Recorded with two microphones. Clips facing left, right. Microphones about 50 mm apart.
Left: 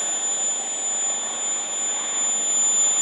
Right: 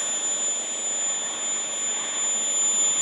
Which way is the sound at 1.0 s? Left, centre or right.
Right.